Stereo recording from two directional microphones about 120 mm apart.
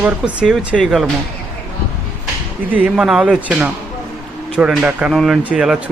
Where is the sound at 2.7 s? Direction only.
10° right (ahead or behind).